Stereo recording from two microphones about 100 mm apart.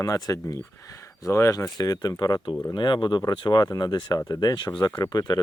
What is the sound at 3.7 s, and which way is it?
Speech, 40° left (ahead or behind).